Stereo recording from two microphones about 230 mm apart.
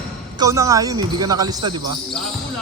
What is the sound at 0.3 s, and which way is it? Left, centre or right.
Speech, centre.